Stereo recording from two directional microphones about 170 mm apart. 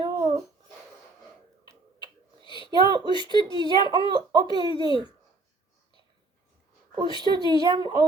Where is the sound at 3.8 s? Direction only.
25° right (ahead or behind).